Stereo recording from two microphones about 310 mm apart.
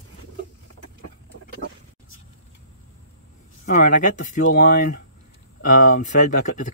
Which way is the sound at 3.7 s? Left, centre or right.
Left.